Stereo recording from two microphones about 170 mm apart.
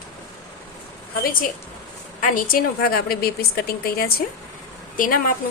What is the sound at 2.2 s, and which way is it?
A woman's voice, 55° left (ahead or behind).